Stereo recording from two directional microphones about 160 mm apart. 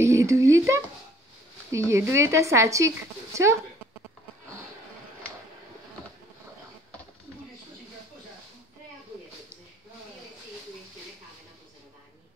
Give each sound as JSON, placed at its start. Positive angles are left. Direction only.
{"t": 0.0, "sound": "speech", "side_deg": -20}